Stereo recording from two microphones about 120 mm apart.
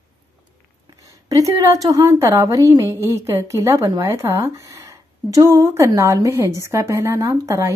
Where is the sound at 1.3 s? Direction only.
30° right (ahead or behind).